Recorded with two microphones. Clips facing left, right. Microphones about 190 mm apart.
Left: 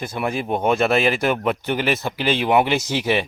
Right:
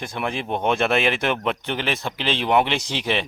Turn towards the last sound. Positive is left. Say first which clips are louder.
# left 4 dB
turn(degrees=5)  # may be behind; listen again after turning